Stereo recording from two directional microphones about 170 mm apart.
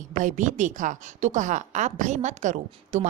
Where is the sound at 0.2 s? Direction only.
45° right (ahead or behind).